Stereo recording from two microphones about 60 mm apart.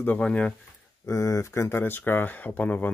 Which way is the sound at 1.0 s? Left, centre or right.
Left.